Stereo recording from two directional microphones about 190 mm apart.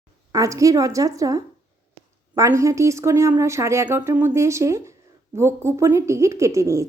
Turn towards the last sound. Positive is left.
turn(degrees=-15)  # may be behind; listen again after turning